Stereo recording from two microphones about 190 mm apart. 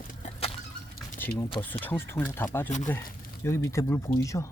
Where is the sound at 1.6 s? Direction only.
10° left (ahead or behind).